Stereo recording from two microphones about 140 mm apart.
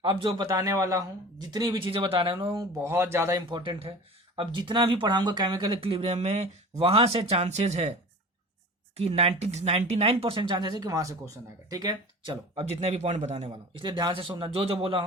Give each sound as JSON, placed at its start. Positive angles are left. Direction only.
{"t": 0.0, "sound": "speech", "side_deg": -35}
{"t": 2.8, "sound": "speech", "side_deg": -20}
{"t": 3.6, "sound": "speech", "side_deg": -40}
{"t": 9.0, "sound": "speech", "side_deg": -45}
{"t": 12.5, "sound": "speech", "side_deg": -50}
{"t": 13.8, "sound": "speech", "side_deg": -35}